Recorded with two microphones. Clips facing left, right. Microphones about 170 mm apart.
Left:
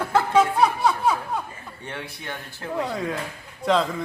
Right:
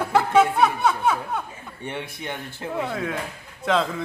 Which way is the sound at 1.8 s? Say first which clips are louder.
Right 3 dB; 20° right (ahead or behind).